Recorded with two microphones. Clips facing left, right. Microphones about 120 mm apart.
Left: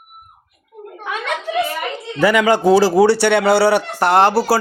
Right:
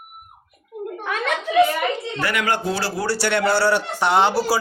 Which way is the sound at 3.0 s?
65° left (ahead or behind).